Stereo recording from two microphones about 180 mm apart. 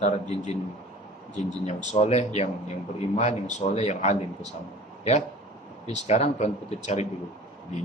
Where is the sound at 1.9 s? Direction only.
35° left (ahead or behind).